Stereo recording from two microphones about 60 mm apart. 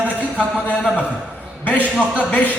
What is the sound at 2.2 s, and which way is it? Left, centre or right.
Speech, left.